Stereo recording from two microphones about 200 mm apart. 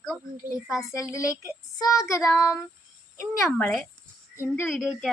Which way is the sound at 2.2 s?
Centre (ahead or behind).